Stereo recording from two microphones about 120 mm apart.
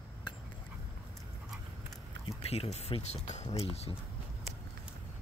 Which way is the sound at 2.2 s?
55° left (ahead or behind).